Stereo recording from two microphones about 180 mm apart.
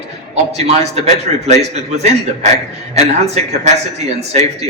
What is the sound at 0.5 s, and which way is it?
A man's voice, 35° right (ahead or behind).